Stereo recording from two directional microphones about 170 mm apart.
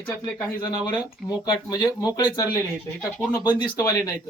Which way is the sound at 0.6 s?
20° left (ahead or behind).